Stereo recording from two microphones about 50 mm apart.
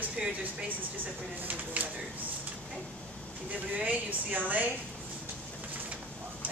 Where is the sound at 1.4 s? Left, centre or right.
Right.